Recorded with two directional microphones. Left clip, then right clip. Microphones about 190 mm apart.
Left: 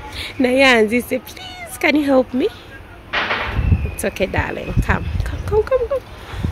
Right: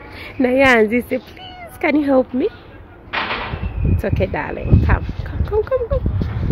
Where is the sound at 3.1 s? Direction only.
35° right (ahead or behind).